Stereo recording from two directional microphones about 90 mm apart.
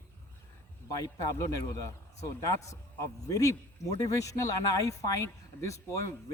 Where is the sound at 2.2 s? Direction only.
35° left (ahead or behind).